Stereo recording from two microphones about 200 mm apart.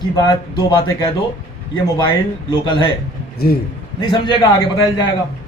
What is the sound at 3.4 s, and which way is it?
Speech, 50° left (ahead or behind).